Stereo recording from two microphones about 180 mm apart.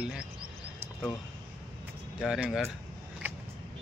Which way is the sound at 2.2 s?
Centre (ahead or behind).